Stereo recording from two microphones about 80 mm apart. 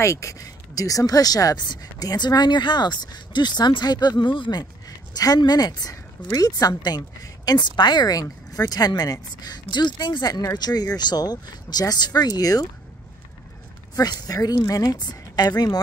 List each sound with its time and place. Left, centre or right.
0.0 s speech: left
7.4 s speech: left
8.1 s speech: left
10.4 s speech: left
13.9 s speech: left